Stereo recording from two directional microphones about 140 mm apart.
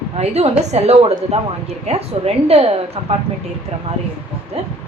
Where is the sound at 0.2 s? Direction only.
50° right (ahead or behind).